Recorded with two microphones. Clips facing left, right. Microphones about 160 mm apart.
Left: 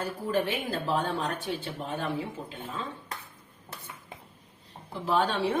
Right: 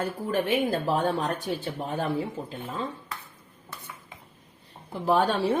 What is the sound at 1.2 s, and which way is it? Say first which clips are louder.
Speech: right 3 dB; 40° right (ahead or behind).